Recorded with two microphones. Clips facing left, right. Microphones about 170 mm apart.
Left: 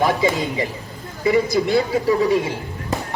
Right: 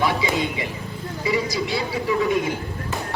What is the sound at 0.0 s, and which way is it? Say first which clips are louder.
Speech: left 3 dB; 45° left (ahead or behind).